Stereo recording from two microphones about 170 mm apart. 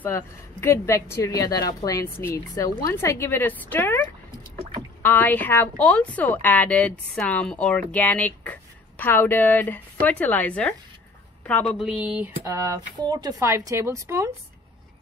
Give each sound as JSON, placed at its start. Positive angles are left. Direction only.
{"t": 0.0, "sound": "a woman's voice", "side_deg": 15}
{"t": 5.0, "sound": "a woman's voice", "side_deg": 10}
{"t": 11.8, "sound": "speech", "side_deg": -5}
{"t": 13.1, "sound": "speech", "side_deg": -20}